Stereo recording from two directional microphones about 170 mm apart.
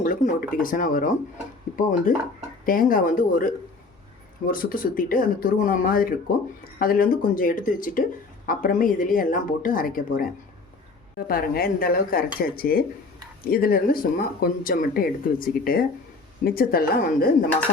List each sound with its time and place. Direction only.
0.0 s speech: 50° left (ahead or behind)
11.3 s speech: 60° left (ahead or behind)